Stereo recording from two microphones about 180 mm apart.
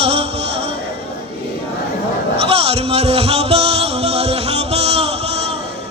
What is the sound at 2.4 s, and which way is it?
Music, 35° right (ahead or behind).